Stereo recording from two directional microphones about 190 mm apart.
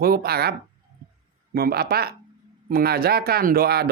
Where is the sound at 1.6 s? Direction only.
55° right (ahead or behind).